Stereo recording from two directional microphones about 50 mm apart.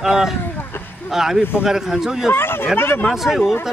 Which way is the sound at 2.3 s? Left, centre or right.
Left.